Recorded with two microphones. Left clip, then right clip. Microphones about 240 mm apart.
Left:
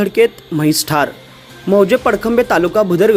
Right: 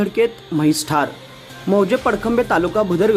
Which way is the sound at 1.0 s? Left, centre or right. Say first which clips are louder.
Left 4 dB; centre.